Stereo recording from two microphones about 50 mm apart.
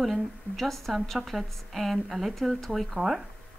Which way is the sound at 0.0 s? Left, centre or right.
Centre.